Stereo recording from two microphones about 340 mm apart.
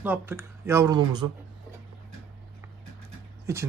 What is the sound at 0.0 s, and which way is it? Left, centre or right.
Speech, centre.